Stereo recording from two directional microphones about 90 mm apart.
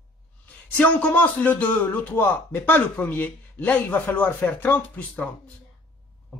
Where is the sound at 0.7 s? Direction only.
15° left (ahead or behind).